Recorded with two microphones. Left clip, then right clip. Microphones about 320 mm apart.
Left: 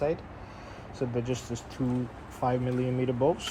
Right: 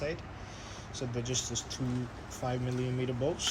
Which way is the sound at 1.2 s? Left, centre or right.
Centre.